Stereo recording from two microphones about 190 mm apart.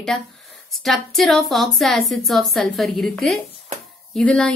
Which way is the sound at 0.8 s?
Centre (ahead or behind).